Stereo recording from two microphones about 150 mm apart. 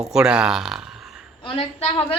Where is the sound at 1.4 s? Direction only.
40° left (ahead or behind).